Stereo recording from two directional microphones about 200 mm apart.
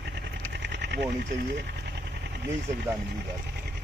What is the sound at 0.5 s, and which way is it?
Sewing machine, 60° right (ahead or behind).